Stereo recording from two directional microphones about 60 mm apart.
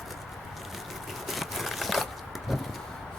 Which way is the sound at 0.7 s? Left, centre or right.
Centre.